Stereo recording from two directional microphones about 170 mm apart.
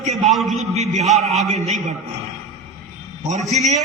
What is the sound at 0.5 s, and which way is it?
Speech, 40° right (ahead or behind).